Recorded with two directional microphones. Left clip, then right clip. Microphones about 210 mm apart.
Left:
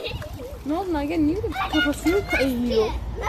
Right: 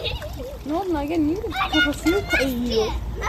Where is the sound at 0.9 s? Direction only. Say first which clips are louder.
Right 1 dB; 55° left (ahead or behind).